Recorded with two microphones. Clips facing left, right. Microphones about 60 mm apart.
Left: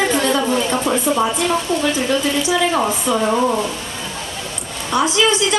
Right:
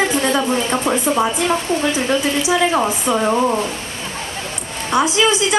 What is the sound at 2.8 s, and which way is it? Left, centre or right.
Speech, centre.